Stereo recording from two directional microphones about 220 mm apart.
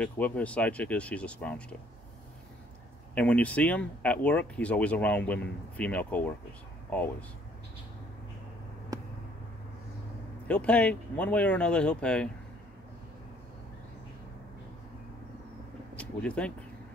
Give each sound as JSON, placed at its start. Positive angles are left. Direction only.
{"t": 0.0, "sound": "speech", "side_deg": 5}
{"t": 3.2, "sound": "speech", "side_deg": 5}
{"t": 8.9, "sound": "a sound", "side_deg": -15}
{"t": 10.5, "sound": "speech", "side_deg": 5}
{"t": 16.0, "sound": "speech", "side_deg": 5}